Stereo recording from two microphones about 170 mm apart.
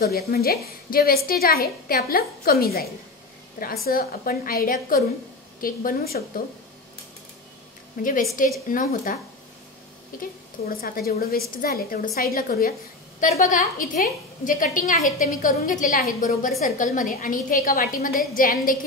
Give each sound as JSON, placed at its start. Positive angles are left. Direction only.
{"t": 0.0, "sound": "a woman's voice", "side_deg": 65}
{"t": 8.0, "sound": "a woman's voice", "side_deg": 50}